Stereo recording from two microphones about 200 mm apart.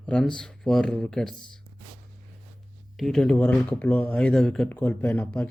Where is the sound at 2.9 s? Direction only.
Centre (ahead or behind).